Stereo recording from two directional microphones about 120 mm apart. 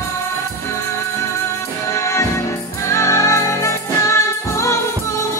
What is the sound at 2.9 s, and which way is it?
Music, 25° left (ahead or behind).